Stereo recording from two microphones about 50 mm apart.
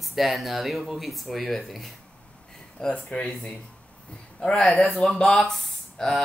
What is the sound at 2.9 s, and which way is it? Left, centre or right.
Speech, left.